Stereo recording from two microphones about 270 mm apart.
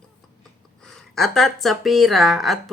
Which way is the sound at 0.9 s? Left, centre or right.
Centre.